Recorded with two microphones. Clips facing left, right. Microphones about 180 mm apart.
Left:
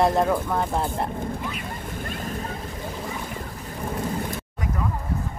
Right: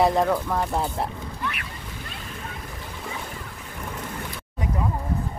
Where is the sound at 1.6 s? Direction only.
50° left (ahead or behind).